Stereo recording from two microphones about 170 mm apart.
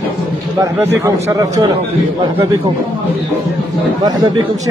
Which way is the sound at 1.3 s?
20° right (ahead or behind).